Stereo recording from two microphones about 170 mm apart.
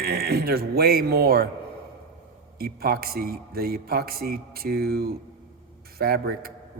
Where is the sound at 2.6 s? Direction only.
65° right (ahead or behind).